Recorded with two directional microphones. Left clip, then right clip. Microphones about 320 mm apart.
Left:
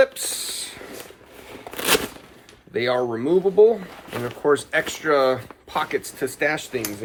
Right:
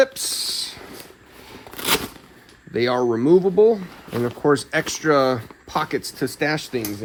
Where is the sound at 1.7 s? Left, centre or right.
Centre.